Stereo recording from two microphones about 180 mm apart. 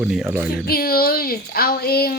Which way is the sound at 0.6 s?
55° left (ahead or behind).